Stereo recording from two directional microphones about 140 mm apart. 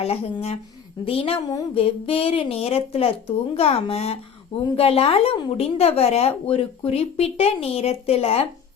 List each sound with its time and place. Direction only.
0.0 s a woman's voice: 45° left (ahead or behind)